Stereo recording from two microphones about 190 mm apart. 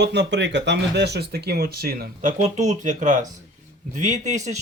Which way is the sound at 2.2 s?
40° right (ahead or behind).